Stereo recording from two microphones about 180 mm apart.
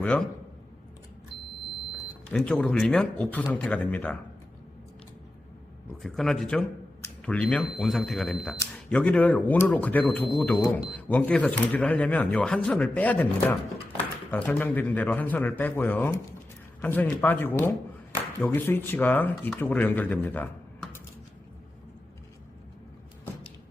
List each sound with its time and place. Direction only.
0.0 s a man's voice: 5° left (ahead or behind)
2.3 s speech: 5° left (ahead or behind)
6.0 s speech: centre (ahead or behind)
7.0 s a sound: 5° left (ahead or behind)
7.6 s speech: centre (ahead or behind)